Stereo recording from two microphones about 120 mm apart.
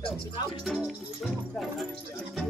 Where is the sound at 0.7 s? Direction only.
5° right (ahead or behind).